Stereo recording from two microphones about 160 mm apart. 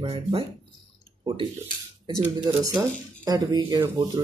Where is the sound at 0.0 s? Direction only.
35° right (ahead or behind).